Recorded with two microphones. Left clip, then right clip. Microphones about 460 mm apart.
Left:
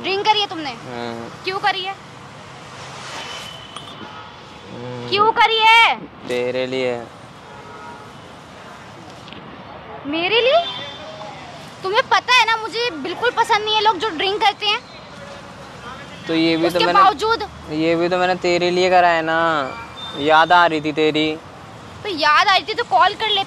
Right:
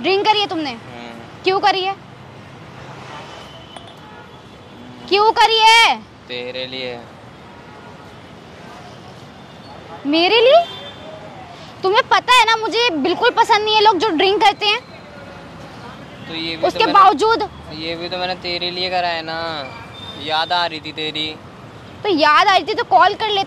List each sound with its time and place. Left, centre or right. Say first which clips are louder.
0.0 s a sound: right 2 dB; right
1.4 s speech: right 5 dB; right
5.1 s speech: right 2 dB; right
6.2 s speech: left 7 dB; left
10.1 s speech: right 4 dB; right
11.8 s speech: right 2 dB; right
16.3 s speech: left 7 dB; left
16.6 s speech: right 4 dB; right
17.7 s speech: left 7 dB; left
22.0 s speech: right 3 dB; right